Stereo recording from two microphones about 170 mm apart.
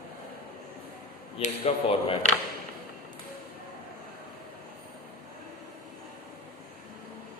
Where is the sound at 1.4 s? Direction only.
40° left (ahead or behind).